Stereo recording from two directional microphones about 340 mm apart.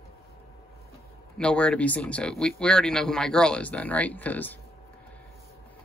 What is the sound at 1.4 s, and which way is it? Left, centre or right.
Speech, centre.